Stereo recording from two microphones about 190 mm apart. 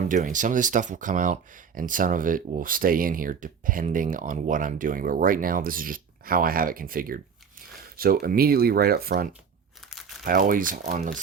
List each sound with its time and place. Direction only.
0.1 s speech: 45° right (ahead or behind)
9.9 s crumpling: centre (ahead or behind)
10.2 s speech: 45° right (ahead or behind)